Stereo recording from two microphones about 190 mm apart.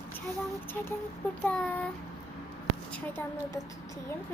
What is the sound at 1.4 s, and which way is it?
Speech, 5° left (ahead or behind).